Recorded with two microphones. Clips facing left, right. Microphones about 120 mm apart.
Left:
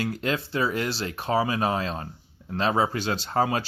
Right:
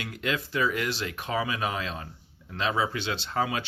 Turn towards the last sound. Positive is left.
turn(degrees=40)  # may be behind; listen again after turning